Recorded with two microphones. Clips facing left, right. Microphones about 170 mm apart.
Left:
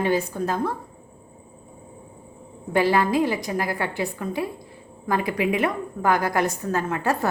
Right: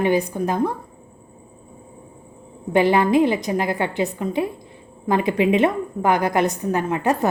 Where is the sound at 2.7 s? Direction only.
20° right (ahead or behind).